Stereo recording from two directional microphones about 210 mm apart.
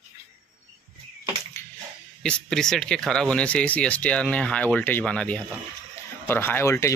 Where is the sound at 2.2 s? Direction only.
5° left (ahead or behind).